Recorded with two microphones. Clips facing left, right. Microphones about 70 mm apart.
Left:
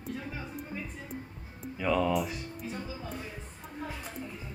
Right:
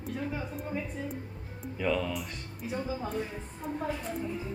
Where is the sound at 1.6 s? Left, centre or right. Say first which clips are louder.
Left 2 dB; centre.